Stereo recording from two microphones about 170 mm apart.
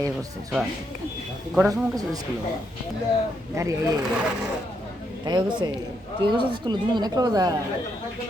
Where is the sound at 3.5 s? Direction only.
20° right (ahead or behind).